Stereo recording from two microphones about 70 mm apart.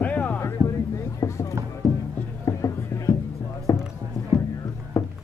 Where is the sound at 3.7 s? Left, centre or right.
Left.